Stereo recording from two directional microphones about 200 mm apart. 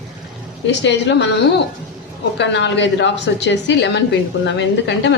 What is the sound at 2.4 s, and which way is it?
A woman's voice, 60° left (ahead or behind).